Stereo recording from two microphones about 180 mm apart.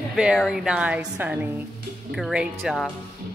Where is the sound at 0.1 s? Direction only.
Centre (ahead or behind).